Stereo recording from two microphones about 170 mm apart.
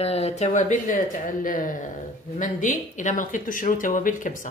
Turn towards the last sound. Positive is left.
turn(degrees=50)  # may be behind; listen again after turning